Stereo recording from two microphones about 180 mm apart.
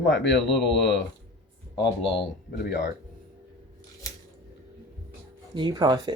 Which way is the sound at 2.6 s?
80° left.